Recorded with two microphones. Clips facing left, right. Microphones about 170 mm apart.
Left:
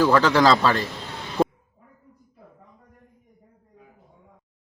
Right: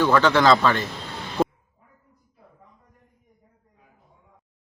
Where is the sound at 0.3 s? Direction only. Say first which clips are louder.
Even; 35° left (ahead or behind).